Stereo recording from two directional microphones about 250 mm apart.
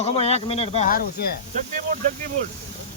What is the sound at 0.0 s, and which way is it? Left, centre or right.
Speech, left.